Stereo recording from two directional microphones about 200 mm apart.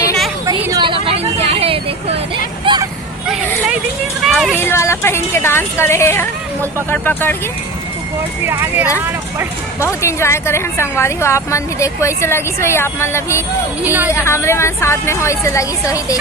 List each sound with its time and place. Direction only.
0.4 s vehicle: 15° right (ahead or behind)
2.7 s hubbub: 25° right (ahead or behind)
4.2 s a sound: centre (ahead or behind)
4.5 s a woman's voice: 10° left (ahead or behind)
8.4 s speech: 10° right (ahead or behind)
9.8 s a woman's voice: 15° left (ahead or behind)
13.8 s speech: 10° right (ahead or behind)
14.1 s a woman's voice: 15° left (ahead or behind)